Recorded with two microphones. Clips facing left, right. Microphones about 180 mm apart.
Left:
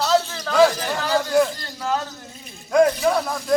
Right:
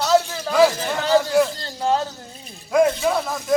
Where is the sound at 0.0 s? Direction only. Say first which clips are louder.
Right 2 dB; 5° right (ahead or behind).